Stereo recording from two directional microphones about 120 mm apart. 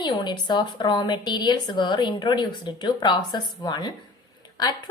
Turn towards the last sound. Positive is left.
turn(degrees=35)  # may be behind; listen again after turning